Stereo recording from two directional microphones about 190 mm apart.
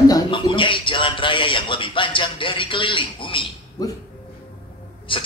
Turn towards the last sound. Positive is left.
turn(degrees=25)  # may be behind; listen again after turning